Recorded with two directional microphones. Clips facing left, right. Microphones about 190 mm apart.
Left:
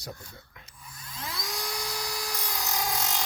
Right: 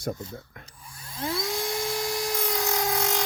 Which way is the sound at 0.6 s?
30° right (ahead or behind).